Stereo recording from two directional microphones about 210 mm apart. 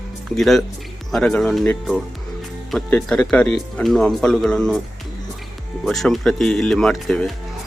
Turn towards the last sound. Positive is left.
turn(degrees=0)  # may be behind; listen again after turning